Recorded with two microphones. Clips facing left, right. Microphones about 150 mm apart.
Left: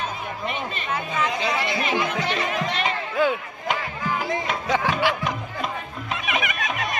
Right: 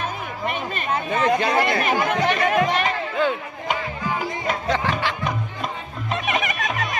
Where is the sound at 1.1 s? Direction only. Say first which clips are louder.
Right 6 dB; 55° right (ahead or behind).